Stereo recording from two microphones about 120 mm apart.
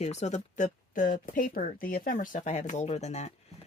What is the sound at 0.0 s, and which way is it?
Speech, 70° left (ahead or behind).